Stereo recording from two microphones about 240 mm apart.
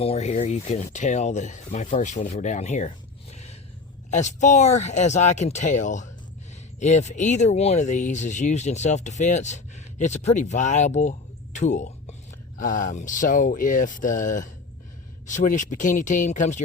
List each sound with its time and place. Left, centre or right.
0.0 s speech: left